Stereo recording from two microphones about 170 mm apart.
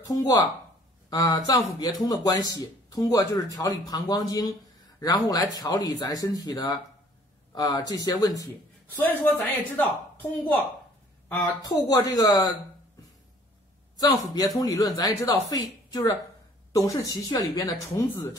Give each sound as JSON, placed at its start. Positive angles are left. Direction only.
{"t": 0.0, "sound": "speech", "side_deg": 20}
{"t": 11.9, "sound": "speech", "side_deg": 20}
{"t": 13.9, "sound": "speech", "side_deg": 20}